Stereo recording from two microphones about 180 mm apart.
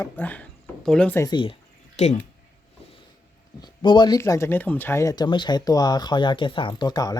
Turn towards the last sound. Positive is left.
turn(degrees=20)  # may be behind; listen again after turning